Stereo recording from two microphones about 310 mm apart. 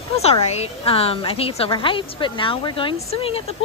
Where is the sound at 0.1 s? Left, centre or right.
Centre.